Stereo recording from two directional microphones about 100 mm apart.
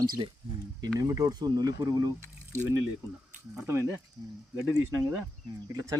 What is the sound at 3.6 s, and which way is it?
Speech, 25° right (ahead or behind).